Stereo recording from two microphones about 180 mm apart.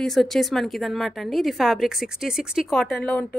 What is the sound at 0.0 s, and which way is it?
A woman's voice, centre (ahead or behind).